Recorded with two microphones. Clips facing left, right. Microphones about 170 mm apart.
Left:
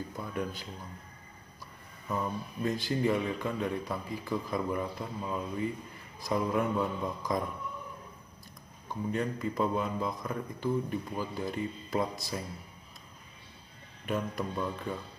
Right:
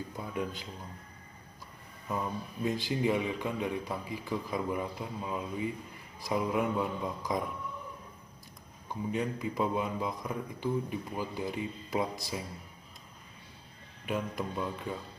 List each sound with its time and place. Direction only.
0.3 s speech: 20° right (ahead or behind)
2.0 s speech: 15° right (ahead or behind)
9.1 s speech: 10° right (ahead or behind)
14.0 s speech: 10° right (ahead or behind)